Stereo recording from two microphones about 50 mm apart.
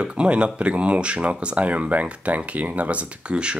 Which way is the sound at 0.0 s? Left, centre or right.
Right.